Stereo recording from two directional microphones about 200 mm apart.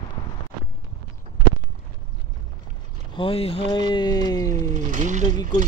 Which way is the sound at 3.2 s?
30° left (ahead or behind).